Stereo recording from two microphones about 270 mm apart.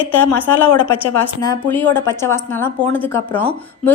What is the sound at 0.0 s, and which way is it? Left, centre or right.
A woman's voice, centre.